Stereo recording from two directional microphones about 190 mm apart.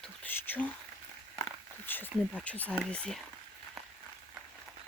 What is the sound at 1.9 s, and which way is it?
Speech, 10° left (ahead or behind).